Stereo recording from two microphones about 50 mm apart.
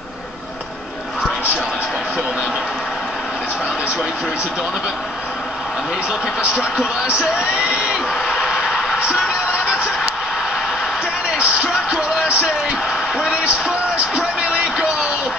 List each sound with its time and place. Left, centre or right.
6.4 s speech: centre
8.1 s a sound: centre
8.5 s music: centre
11.3 s music: right
13.9 s speech: right